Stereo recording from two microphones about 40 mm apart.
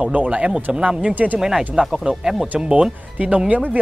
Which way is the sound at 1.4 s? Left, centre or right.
Centre.